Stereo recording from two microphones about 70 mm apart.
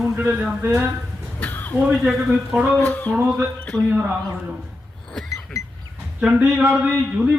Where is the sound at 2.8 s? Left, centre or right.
Left.